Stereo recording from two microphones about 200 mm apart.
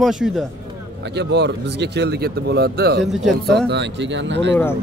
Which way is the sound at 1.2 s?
60° right (ahead or behind).